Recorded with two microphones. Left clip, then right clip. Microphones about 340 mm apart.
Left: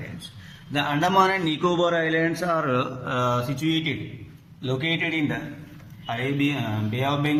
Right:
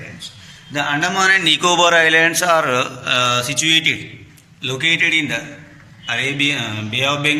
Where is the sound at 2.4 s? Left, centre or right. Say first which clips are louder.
Right 9 dB; right.